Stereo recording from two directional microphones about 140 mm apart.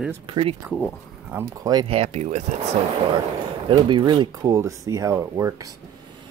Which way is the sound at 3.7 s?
35° right (ahead or behind).